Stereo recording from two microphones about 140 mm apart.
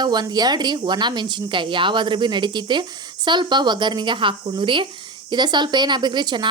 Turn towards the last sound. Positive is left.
turn(degrees=-35)  # may be behind; listen again after turning